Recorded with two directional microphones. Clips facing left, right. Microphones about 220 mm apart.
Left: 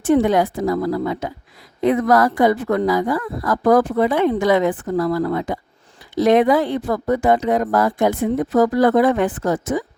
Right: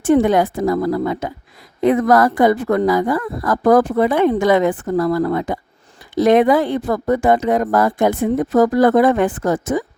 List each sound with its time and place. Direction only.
0.0 s speech: 50° right (ahead or behind)